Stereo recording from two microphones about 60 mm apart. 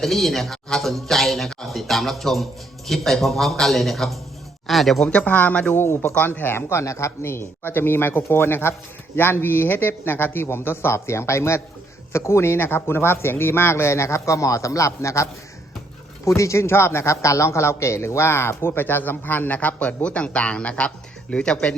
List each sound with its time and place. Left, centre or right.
0.0 s speech: centre
5.0 s speech: left
5.7 s a man's voice: left
6.1 s a man's voice: left